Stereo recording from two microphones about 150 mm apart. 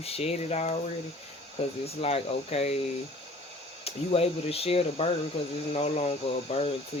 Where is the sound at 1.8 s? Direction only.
40° left (ahead or behind).